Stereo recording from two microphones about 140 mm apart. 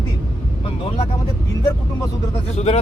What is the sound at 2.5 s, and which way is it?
Speech, 50° left (ahead or behind).